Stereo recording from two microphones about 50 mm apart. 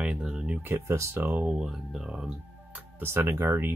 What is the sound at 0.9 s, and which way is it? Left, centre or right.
Speech, right.